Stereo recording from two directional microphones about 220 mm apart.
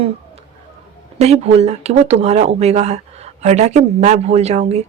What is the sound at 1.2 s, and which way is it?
Speech, 30° right (ahead or behind).